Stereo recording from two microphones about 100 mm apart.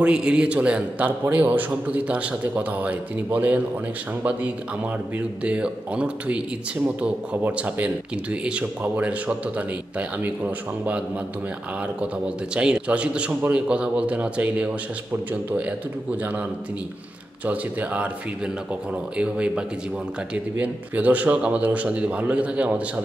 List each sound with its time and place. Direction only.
0.0 s speech: 10° right (ahead or behind)
12.5 s speech: 10° right (ahead or behind)
16.2 s speech: 15° right (ahead or behind)
17.5 s speech: 15° right (ahead or behind)